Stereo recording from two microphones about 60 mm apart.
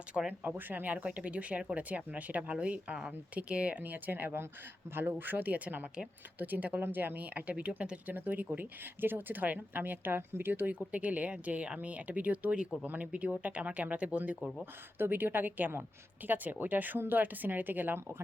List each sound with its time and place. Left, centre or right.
0.1 s speech: centre
0.4 s speech: right
14.6 s speech: right